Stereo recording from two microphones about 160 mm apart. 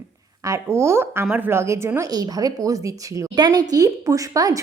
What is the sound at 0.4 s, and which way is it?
A woman's voice, 20° right (ahead or behind).